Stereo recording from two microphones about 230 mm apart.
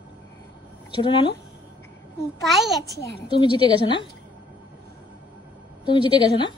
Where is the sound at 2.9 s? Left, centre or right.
Centre.